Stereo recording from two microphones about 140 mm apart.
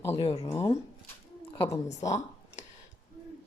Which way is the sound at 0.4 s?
20° left (ahead or behind).